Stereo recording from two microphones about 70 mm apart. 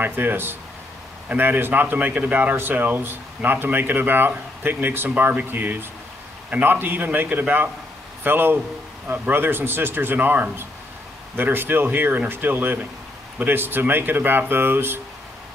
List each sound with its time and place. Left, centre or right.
0.0 s speech: right